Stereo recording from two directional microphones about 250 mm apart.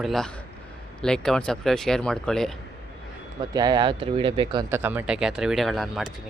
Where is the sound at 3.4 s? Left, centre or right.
Centre.